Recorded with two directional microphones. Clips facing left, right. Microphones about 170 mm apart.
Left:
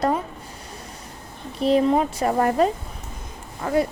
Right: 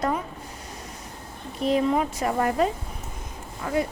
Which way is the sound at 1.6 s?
30° left (ahead or behind).